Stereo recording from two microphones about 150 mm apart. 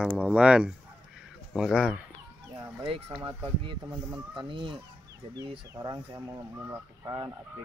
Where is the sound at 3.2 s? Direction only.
35° right (ahead or behind).